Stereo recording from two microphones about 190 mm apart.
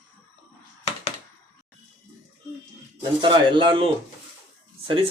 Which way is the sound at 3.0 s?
25° right (ahead or behind).